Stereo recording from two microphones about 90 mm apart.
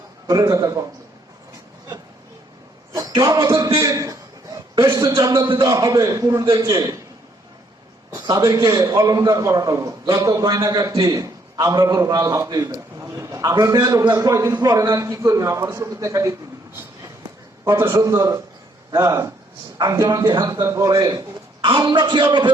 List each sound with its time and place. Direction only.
0.3 s a man's voice: 40° right (ahead or behind)
2.9 s a sound: 45° right (ahead or behind)
3.3 s a man's voice: 40° right (ahead or behind)
3.8 s a sound: 40° right (ahead or behind)
5.3 s a man's voice: 55° right (ahead or behind)
5.6 s a man's voice: 40° right (ahead or behind)
8.4 s a man's voice: 35° right (ahead or behind)
17.7 s a man's voice: 30° right (ahead or behind)
18.9 s speech: 50° right (ahead or behind)
20.7 s a man's voice: 40° right (ahead or behind); by 22.5 s 55° right (ahead or behind)